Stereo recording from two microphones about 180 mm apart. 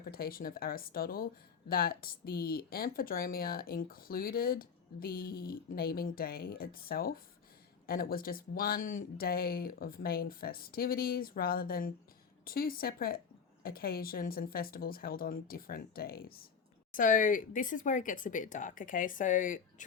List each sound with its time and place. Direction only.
0.0 s speech: 55° left (ahead or behind)